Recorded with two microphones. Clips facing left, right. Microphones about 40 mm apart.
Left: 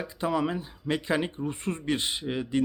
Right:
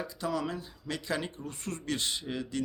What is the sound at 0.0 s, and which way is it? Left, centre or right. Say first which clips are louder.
Speech: left 5 dB; left.